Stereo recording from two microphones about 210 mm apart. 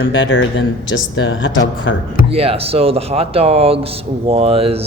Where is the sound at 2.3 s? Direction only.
30° right (ahead or behind).